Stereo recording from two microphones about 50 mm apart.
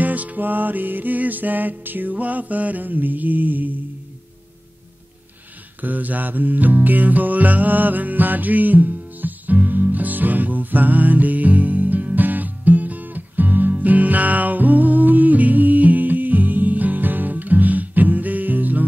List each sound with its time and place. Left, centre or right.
0.0 s music: right
5.8 s music: right